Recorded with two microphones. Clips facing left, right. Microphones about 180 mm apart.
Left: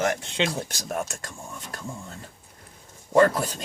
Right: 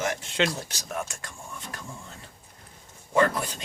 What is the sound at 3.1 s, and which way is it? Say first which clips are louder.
Speech: left 4 dB; 40° left (ahead or behind).